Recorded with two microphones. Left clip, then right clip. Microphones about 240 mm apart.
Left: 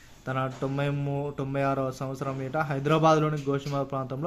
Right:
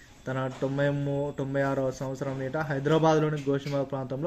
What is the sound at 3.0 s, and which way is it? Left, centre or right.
Speech, left.